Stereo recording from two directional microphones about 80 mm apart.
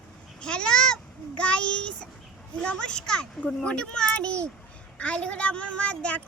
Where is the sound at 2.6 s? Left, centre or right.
Centre.